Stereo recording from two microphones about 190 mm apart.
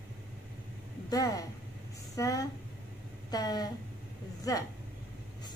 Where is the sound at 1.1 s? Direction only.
20° left (ahead or behind).